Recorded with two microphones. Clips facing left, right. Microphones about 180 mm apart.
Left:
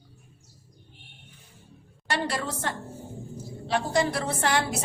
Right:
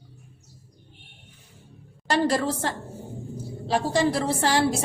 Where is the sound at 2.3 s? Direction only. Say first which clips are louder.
Right 6 dB; 30° right (ahead or behind).